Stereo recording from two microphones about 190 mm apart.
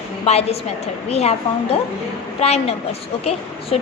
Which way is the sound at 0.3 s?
35° left (ahead or behind).